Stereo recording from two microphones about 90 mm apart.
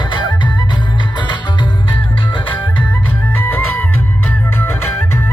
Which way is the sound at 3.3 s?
20° left (ahead or behind).